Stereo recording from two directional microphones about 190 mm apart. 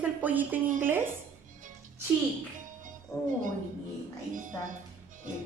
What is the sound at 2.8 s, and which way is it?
Music, 45° right (ahead or behind).